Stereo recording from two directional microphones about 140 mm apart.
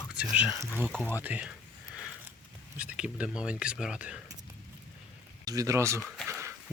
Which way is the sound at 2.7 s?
10° right (ahead or behind).